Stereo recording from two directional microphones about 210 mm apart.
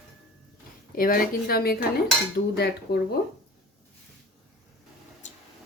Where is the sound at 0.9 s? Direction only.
40° left (ahead or behind).